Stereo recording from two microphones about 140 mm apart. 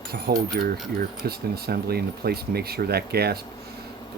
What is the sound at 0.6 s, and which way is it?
Speech, 90° right.